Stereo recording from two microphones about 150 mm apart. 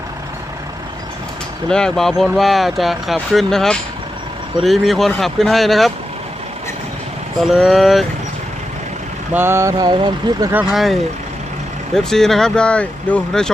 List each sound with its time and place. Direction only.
1.7 s speech: 5° left (ahead or behind)
7.4 s speech: centre (ahead or behind)
9.3 s speech: 15° right (ahead or behind)
10.5 s speech: 5° right (ahead or behind)
11.9 s speech: centre (ahead or behind)